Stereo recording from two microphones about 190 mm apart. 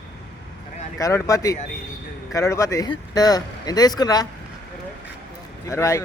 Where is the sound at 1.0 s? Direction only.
15° left (ahead or behind).